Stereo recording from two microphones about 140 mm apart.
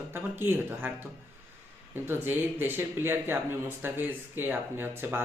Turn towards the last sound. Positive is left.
turn(degrees=-15)  # may be behind; listen again after turning